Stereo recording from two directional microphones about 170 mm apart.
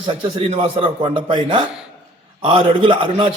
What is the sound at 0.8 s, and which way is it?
A man's voice, 30° right (ahead or behind).